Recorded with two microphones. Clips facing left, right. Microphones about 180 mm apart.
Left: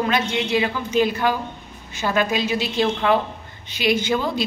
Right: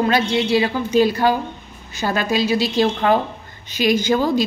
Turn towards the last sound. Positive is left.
turn(degrees=-40)  # may be behind; listen again after turning